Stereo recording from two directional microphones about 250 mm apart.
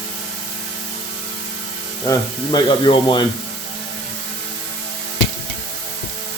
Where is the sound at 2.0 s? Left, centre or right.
Centre.